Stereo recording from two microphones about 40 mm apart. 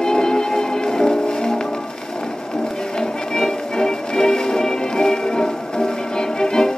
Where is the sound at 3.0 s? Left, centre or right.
Centre.